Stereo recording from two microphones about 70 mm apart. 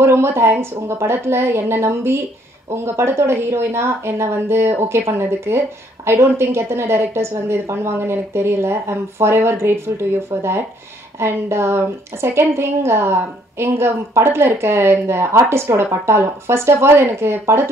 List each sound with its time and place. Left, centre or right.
0.0 s a woman's voice: right